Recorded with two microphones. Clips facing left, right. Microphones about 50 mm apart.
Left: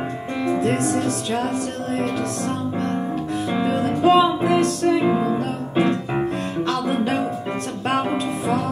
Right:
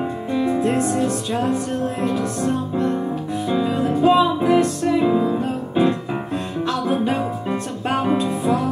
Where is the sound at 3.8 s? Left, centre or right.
Centre.